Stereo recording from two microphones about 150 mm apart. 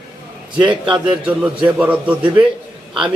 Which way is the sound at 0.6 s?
30° right (ahead or behind).